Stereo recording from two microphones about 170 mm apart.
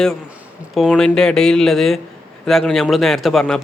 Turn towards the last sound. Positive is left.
turn(degrees=0)  # may be behind; listen again after turning